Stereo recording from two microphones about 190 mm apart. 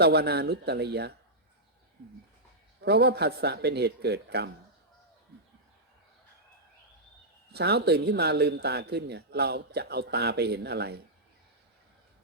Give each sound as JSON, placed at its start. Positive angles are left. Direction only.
{"t": 0.0, "sound": "speech", "side_deg": -55}
{"t": 2.8, "sound": "speech", "side_deg": -60}
{"t": 7.5, "sound": "speech", "side_deg": -60}